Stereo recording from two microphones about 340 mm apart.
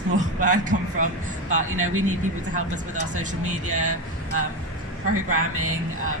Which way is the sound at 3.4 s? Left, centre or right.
Right.